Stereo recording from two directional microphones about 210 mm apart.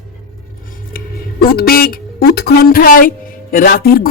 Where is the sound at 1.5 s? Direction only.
45° left (ahead or behind).